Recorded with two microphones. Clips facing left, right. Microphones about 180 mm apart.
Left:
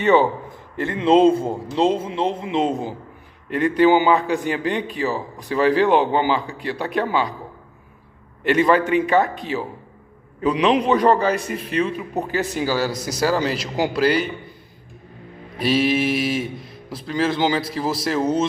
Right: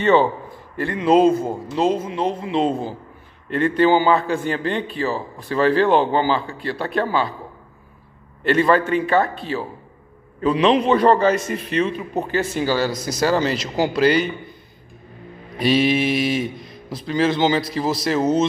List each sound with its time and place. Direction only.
0.0 s a man's voice: 15° left (ahead or behind)
8.5 s a man's voice: 15° left (ahead or behind)
15.6 s speech: 5° left (ahead or behind)